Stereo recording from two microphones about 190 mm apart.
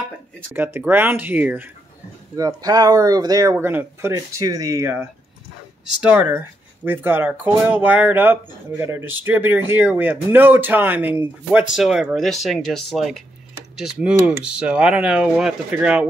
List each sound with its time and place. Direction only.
0.5 s speech: 10° right (ahead or behind)
6.0 s speech: 10° right (ahead or behind)